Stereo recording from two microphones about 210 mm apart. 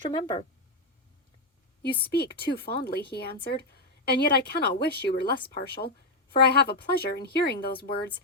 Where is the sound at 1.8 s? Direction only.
50° left (ahead or behind).